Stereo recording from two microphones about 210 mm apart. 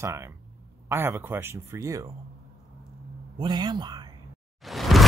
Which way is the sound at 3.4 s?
20° right (ahead or behind).